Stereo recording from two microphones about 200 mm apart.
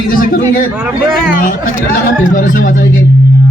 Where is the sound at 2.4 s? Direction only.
45° left (ahead or behind).